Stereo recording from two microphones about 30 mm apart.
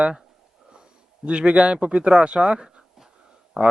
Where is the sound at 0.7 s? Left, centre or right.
Right.